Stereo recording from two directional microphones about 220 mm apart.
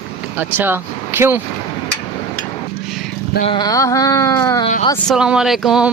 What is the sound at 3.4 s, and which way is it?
Speech, 20° left (ahead or behind).